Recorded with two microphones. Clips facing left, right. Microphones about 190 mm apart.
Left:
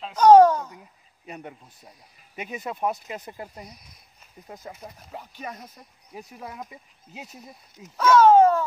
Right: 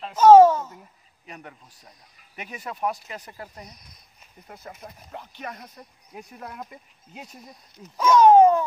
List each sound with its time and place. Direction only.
0.0 s babbling: 5° right (ahead or behind)
2.5 s speech: 20° left (ahead or behind)
3.6 s speech: 5° left (ahead or behind)
8.0 s a sound: 15° right (ahead or behind)